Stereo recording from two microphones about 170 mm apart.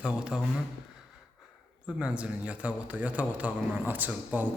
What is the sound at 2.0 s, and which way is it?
A man's voice, 5° right (ahead or behind).